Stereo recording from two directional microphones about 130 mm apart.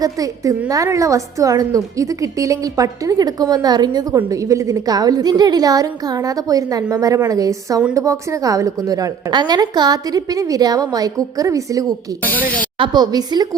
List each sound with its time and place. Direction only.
0.0 s a woman's voice: 25° right (ahead or behind)
11.9 s speech: 10° left (ahead or behind)
12.8 s a woman's voice: 35° right (ahead or behind)